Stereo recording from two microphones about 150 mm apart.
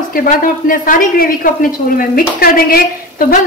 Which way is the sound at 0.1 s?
70° left (ahead or behind).